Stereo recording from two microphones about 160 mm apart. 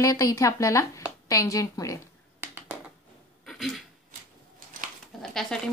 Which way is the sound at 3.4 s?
Centre (ahead or behind).